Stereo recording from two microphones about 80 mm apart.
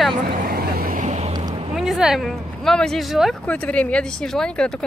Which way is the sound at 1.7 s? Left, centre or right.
Centre.